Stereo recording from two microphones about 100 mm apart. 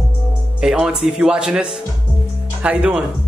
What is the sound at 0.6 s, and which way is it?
Speech, 5° right (ahead or behind).